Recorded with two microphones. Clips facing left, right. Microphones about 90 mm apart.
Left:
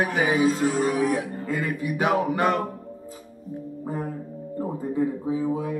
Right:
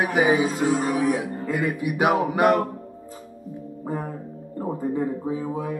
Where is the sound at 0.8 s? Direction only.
5° right (ahead or behind).